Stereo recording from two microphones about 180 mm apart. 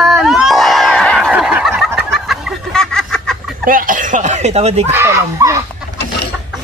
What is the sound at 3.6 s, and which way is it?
Speech, 50° right (ahead or behind).